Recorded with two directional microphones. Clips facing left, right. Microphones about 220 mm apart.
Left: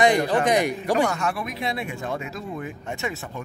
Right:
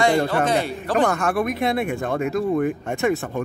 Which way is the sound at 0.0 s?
15° left (ahead or behind).